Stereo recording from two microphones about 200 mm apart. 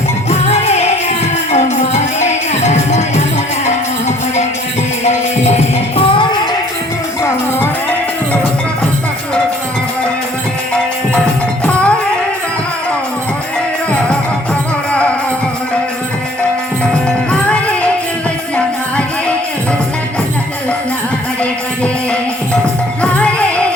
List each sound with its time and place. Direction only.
0.3 s music: 35° left (ahead or behind)
5.0 s music: 35° left (ahead or behind)
11.6 s music: 5° left (ahead or behind)
17.5 s music: 5° left (ahead or behind)
23.0 s music: 5° left (ahead or behind)